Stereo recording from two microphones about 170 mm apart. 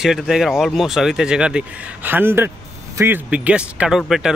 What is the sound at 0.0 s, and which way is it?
Speech, 5° right (ahead or behind).